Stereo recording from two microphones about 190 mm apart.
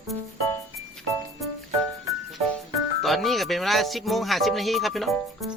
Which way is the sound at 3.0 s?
Centre (ahead or behind).